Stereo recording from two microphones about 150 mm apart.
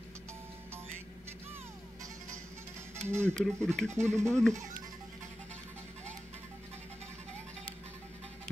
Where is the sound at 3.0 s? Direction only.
15° right (ahead or behind).